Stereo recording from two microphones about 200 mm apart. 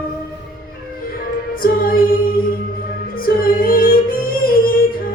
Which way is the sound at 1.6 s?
45° left (ahead or behind).